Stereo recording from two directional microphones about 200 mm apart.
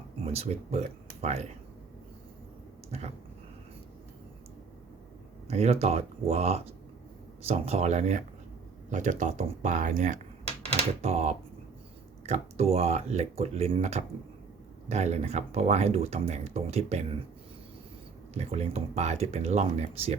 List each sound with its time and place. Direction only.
0.3 s speech: 30° right (ahead or behind)
2.9 s speech: 35° right (ahead or behind)
5.5 s speech: 30° right (ahead or behind)
18.3 s speech: 30° right (ahead or behind)